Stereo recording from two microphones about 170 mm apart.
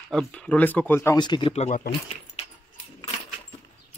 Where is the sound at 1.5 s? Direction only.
40° left (ahead or behind).